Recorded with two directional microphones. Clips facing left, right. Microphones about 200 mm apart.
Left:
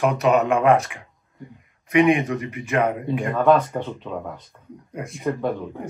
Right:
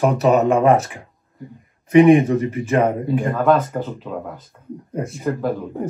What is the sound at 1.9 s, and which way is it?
Speech, 30° right (ahead or behind).